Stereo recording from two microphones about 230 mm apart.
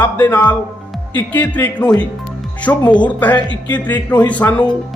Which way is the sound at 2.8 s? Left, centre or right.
Centre.